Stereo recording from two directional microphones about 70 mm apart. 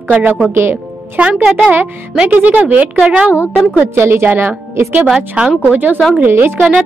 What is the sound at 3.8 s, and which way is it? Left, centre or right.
A woman's voice, right.